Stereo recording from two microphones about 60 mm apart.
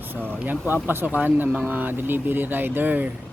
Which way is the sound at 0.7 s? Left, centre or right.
Right.